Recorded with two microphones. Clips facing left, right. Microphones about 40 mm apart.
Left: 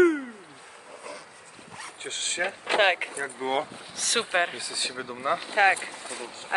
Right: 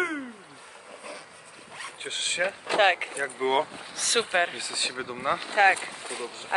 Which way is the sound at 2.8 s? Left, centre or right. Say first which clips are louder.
Right 1 dB; centre.